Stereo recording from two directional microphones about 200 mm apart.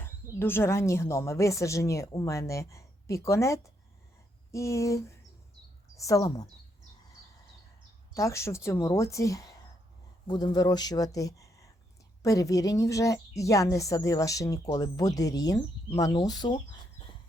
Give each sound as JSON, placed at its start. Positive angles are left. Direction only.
{"t": 0.0, "sound": "a woman's voice", "side_deg": 10}
{"t": 8.1, "sound": "a woman's voice", "side_deg": 15}